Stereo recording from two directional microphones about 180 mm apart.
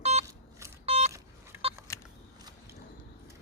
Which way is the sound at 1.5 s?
15° right (ahead or behind).